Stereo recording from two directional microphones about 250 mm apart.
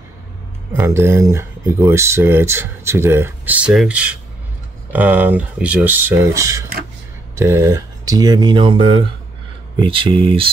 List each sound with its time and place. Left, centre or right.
0.7 s speech: centre